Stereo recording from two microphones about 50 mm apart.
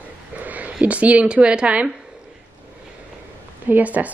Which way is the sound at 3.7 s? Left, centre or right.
Right.